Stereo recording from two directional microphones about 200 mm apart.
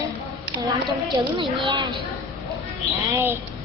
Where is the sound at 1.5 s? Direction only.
20° right (ahead or behind).